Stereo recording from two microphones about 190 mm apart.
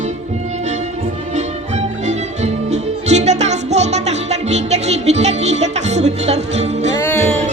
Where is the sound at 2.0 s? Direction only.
35° right (ahead or behind).